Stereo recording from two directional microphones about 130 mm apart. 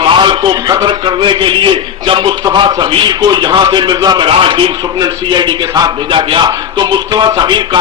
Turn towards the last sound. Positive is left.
turn(degrees=-35)  # may be behind; listen again after turning